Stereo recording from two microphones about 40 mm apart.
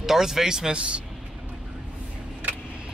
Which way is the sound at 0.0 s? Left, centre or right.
Centre.